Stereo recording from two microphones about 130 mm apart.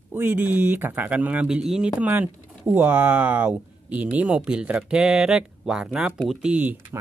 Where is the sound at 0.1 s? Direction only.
15° right (ahead or behind).